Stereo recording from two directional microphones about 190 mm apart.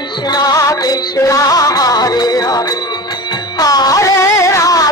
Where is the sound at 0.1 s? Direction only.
20° left (ahead or behind).